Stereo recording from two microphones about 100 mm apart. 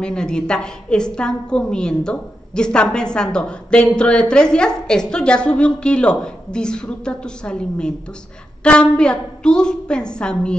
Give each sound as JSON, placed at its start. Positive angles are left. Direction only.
{"t": 0.0, "sound": "a woman's voice", "side_deg": 10}